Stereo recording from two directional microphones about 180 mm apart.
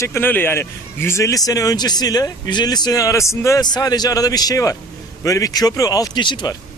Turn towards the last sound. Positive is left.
turn(degrees=25)  # may be behind; listen again after turning